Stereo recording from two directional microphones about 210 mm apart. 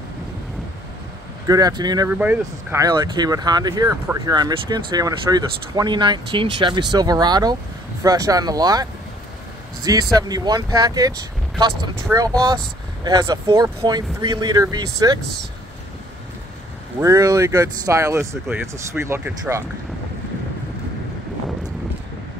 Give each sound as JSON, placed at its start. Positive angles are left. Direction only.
{"t": 1.5, "sound": "speech", "side_deg": -20}
{"t": 2.0, "sound": "speech", "side_deg": -10}
{"t": 10.1, "sound": "speech", "side_deg": -20}
{"t": 17.0, "sound": "speech", "side_deg": -15}